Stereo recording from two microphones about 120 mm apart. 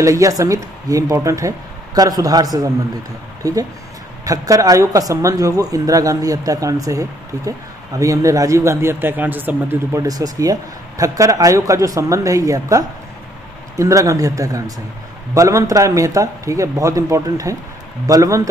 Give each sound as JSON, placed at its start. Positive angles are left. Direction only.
{"t": 0.0, "sound": "a man's voice", "side_deg": -25}
{"t": 4.2, "sound": "speech", "side_deg": -30}
{"t": 9.9, "sound": "speech", "side_deg": -30}